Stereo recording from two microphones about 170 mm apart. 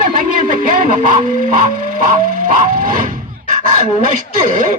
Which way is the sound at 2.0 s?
50° right (ahead or behind).